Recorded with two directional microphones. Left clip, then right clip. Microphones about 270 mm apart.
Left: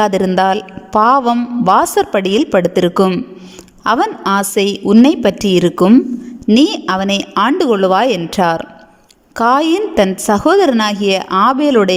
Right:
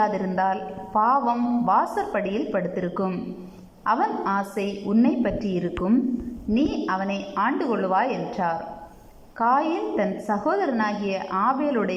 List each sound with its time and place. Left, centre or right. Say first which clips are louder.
0.0 s speech: left 10 dB; left